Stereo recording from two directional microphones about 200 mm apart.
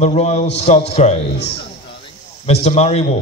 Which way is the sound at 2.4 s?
30° left (ahead or behind).